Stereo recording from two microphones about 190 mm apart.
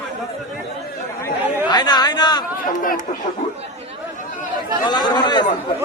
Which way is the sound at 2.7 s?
45° left (ahead or behind).